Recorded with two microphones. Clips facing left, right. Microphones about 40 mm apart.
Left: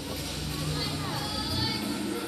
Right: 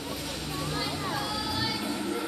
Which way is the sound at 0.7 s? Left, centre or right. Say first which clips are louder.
Right 2 dB; centre.